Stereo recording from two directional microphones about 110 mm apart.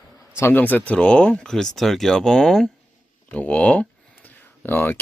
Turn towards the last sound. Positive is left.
turn(degrees=20)  # may be behind; listen again after turning